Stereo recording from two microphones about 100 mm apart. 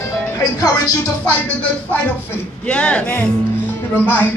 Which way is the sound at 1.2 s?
15° left (ahead or behind).